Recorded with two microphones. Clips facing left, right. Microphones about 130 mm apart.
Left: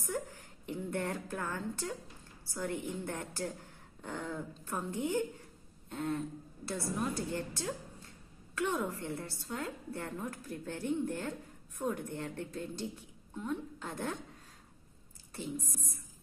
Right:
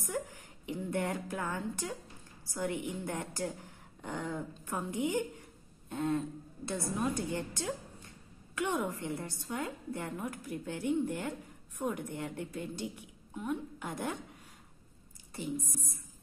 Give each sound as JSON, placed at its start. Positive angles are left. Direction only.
{"t": 0.7, "sound": "a woman's voice", "side_deg": -15}